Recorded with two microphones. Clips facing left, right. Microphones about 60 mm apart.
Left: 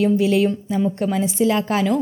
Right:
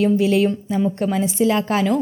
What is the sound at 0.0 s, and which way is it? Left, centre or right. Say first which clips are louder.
A woman's voice: even; right.